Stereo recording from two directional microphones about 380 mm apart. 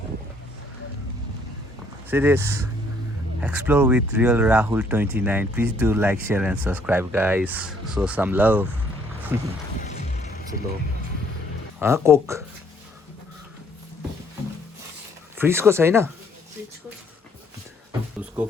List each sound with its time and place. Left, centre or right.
2.0 s speech: centre
9.8 s music: centre
11.8 s speech: centre
15.4 s speech: centre